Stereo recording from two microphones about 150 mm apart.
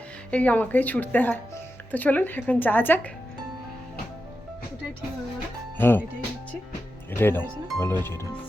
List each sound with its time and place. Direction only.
0.3 s speech: 10° left (ahead or behind)
5.7 s speech: 15° left (ahead or behind)
7.1 s speech: 15° left (ahead or behind)